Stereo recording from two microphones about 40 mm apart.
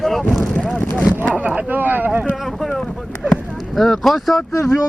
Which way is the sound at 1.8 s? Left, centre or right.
Right.